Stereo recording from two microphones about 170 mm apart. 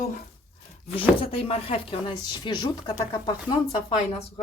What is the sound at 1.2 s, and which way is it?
Speech, 35° left (ahead or behind).